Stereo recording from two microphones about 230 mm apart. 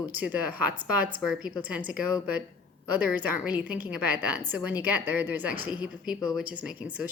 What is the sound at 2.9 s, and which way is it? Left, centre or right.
A woman's voice, centre.